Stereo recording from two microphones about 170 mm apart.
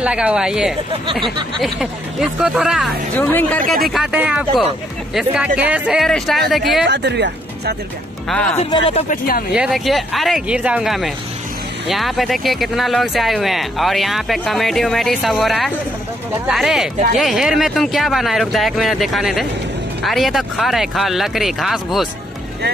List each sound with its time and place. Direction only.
0.0 s speech: 5° right (ahead or behind)
3.2 s speech: 10° left (ahead or behind)
3.9 s speech: 5° right (ahead or behind)
6.9 s speech: 90° right
8.3 s speech: 5° left (ahead or behind)
8.6 s speech: 30° left (ahead or behind)
9.1 s speech: 60° left (ahead or behind)
9.5 s speech: 5° right (ahead or behind)